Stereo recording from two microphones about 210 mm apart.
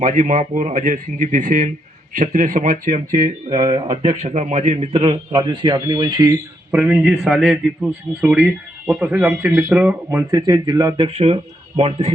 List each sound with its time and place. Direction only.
0.0 s speech: 40° right (ahead or behind)
3.2 s speech: 20° right (ahead or behind)
4.2 s speech: 30° right (ahead or behind)
6.7 s a man's voice: 5° right (ahead or behind); by 12.1 s 30° right (ahead or behind)